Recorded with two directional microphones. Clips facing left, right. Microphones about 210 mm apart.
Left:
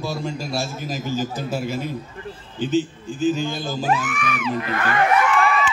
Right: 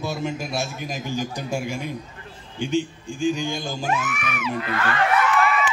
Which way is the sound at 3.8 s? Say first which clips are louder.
Left 4 dB; 35° left (ahead or behind).